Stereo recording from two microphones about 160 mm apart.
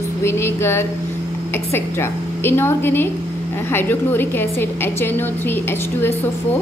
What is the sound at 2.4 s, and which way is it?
A woman's voice, 15° left (ahead or behind).